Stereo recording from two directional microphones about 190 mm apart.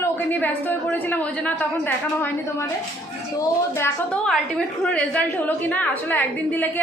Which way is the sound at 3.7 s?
15° left (ahead or behind).